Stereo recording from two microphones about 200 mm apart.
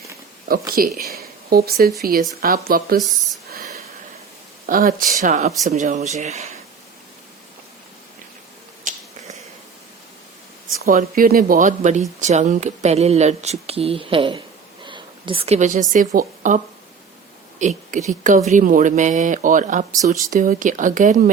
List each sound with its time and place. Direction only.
0.8 s speech: 45° right (ahead or behind)
3.0 s speech: centre (ahead or behind)
4.6 s speech: 45° right (ahead or behind)
8.8 s finger snapping: 40° right (ahead or behind)
10.8 s a woman's voice: 45° right (ahead or behind)
17.6 s speech: 35° right (ahead or behind)